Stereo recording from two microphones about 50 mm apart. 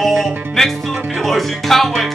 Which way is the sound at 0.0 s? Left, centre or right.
Centre.